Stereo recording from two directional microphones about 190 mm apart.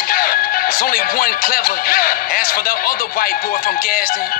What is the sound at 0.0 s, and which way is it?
Speech, 50° left (ahead or behind).